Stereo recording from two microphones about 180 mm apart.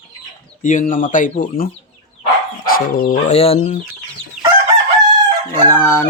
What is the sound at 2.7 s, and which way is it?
Speech, 55° left (ahead or behind).